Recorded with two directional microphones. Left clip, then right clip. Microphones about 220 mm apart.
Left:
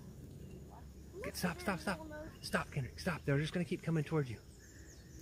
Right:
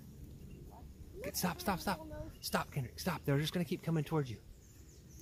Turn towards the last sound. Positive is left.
turn(degrees=-20)  # may be behind; listen again after turning